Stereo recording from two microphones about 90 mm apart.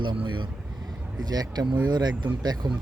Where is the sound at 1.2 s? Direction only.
45° right (ahead or behind).